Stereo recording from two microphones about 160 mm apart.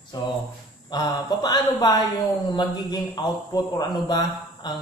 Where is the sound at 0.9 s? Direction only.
25° left (ahead or behind).